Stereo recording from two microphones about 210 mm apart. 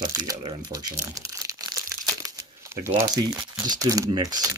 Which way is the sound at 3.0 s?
20° right (ahead or behind).